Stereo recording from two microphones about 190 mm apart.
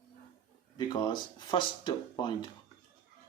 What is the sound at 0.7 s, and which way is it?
Speech, 20° left (ahead or behind).